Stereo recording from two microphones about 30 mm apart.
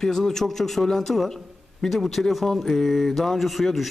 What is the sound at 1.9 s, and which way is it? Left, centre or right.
Speech, centre.